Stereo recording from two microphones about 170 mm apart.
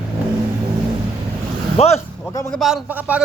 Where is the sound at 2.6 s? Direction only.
5° right (ahead or behind).